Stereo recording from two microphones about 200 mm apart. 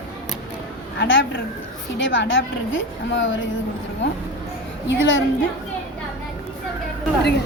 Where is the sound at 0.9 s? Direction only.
70° left (ahead or behind).